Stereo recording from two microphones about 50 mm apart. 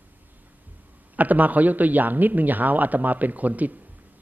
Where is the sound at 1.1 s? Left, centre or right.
Right.